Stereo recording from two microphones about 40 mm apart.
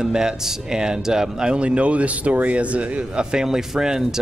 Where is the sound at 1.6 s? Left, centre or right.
Right.